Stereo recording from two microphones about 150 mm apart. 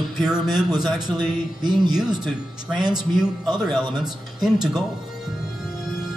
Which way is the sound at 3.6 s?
5° right (ahead or behind).